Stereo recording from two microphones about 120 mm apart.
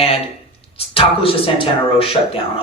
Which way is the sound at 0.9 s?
50° left (ahead or behind).